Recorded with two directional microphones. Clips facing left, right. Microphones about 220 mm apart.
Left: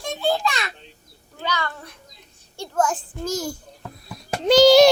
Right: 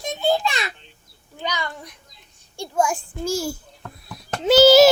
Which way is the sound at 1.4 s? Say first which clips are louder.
Left 1 dB; 15° right (ahead or behind).